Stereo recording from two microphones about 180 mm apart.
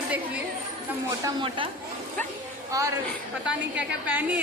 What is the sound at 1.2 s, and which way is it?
Speech, 25° right (ahead or behind).